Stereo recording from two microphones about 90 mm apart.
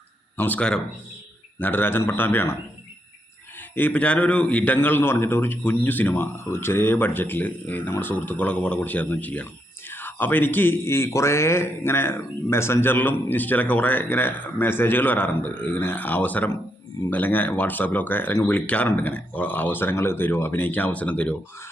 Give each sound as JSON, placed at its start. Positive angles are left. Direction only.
{"t": 0.3, "sound": "speech", "side_deg": 20}
{"t": 3.8, "sound": "speech", "side_deg": 15}